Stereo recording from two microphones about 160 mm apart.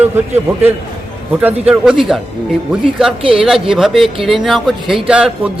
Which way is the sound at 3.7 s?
Centre (ahead or behind).